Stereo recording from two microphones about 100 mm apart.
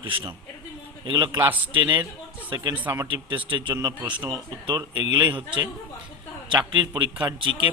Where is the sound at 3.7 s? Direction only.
30° right (ahead or behind); by 5.4 s 50° right (ahead or behind).